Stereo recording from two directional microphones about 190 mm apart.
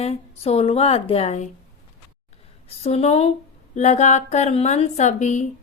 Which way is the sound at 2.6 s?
30° left (ahead or behind).